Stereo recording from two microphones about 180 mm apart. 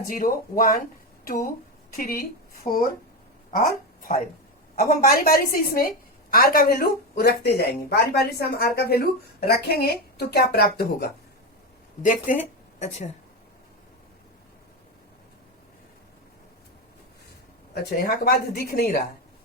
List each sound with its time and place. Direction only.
0.1 s speech: 50° left (ahead or behind)
2.0 s speech: 55° left (ahead or behind)
4.8 s speech: 55° left (ahead or behind)
12.0 s speech: 45° left (ahead or behind)
17.8 s speech: 60° left (ahead or behind)